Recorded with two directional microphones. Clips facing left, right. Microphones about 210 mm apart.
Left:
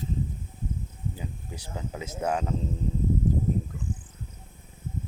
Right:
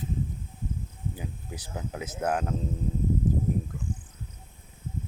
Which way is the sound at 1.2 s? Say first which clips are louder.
Even; 10° right (ahead or behind).